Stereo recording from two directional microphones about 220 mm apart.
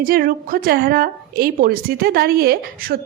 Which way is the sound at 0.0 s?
40° right (ahead or behind).